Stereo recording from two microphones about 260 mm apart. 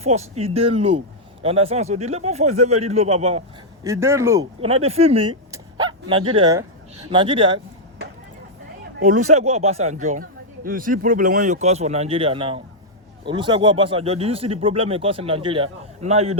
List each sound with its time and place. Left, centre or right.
0.0 s speech: right
3.8 s speech: centre
4.6 s speech: right
5.5 s a sound: centre
6.3 s speech: centre
9.0 s speech: right